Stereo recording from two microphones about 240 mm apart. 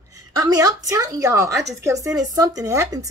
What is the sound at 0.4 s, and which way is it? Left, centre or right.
Speech, centre.